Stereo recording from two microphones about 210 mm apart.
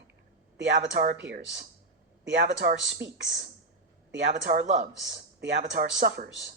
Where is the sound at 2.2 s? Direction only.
60° right (ahead or behind).